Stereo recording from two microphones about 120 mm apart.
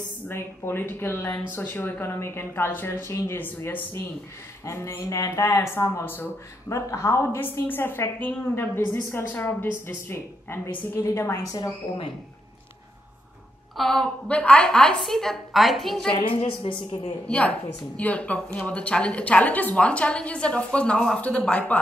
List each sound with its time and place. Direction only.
0.3 s a woman's voice: 20° left (ahead or behind)
13.7 s a woman's voice: 5° left (ahead or behind)
16.1 s a woman's voice: 50° left (ahead or behind)
17.3 s a woman's voice: 10° left (ahead or behind)